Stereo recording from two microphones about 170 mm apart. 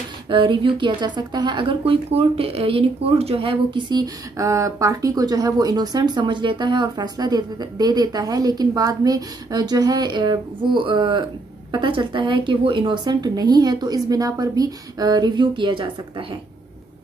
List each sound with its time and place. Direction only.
0.3 s a woman's voice: 30° right (ahead or behind)